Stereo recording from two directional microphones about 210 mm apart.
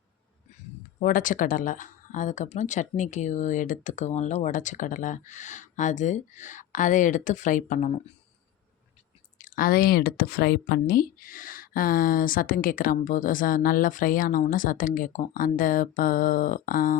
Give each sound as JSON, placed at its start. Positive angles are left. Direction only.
{"t": 0.9, "sound": "speech", "side_deg": 40}
{"t": 9.4, "sound": "speech", "side_deg": 40}